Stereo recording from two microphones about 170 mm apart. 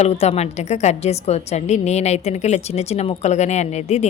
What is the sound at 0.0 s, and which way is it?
A woman's voice, 40° left (ahead or behind).